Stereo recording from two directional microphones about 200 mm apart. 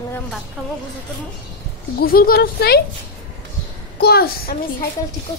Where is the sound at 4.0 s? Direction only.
50° left (ahead or behind).